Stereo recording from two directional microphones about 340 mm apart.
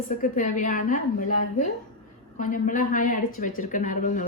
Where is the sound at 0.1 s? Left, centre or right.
Left.